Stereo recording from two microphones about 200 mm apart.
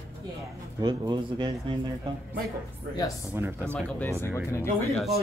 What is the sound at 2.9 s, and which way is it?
Speech, 15° left (ahead or behind).